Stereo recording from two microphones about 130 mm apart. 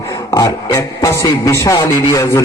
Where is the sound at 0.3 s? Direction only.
25° left (ahead or behind).